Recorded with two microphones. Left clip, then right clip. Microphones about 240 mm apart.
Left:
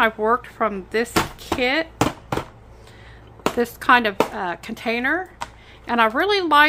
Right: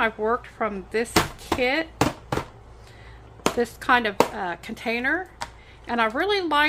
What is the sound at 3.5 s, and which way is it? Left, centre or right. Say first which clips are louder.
A woman's voice: left 5 dB; centre.